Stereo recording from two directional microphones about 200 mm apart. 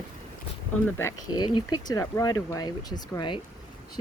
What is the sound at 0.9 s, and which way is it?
Speech, 10° left (ahead or behind).